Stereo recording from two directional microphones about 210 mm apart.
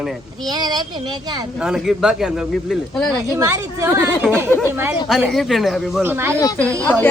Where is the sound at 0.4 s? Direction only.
20° right (ahead or behind).